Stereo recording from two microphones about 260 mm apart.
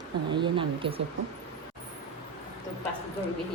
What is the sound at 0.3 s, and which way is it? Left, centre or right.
Speech, centre.